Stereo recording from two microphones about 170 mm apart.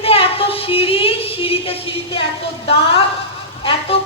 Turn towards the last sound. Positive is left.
turn(degrees=35)  # may be behind; listen again after turning